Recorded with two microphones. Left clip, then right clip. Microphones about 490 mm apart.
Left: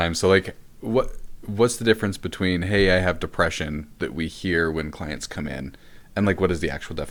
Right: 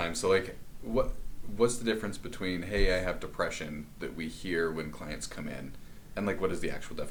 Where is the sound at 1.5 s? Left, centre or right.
Left.